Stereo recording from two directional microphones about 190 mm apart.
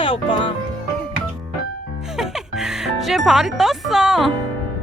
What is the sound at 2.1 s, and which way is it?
Music, centre (ahead or behind).